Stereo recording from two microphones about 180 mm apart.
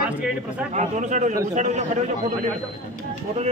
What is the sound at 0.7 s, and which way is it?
A man's voice, 40° right (ahead or behind).